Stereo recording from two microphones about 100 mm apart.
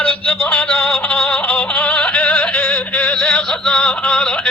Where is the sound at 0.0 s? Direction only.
15° left (ahead or behind).